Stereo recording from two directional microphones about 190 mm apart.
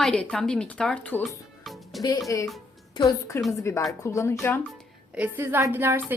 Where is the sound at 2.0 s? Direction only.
20° left (ahead or behind).